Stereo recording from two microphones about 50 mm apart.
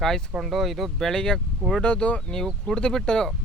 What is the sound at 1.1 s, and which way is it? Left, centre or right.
Speech, centre.